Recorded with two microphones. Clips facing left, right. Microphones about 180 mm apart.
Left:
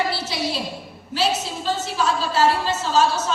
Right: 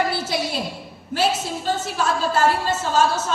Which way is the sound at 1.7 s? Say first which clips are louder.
Even; 50° right (ahead or behind).